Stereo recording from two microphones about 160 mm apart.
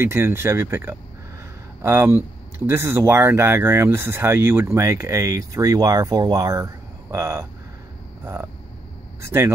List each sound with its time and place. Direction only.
0.0 s speech: 15° right (ahead or behind)
9.2 s speech: 15° right (ahead or behind)